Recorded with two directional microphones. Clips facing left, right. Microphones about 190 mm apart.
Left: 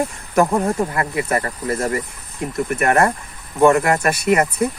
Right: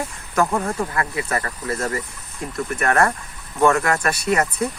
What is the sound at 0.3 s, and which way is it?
Speech, 20° left (ahead or behind).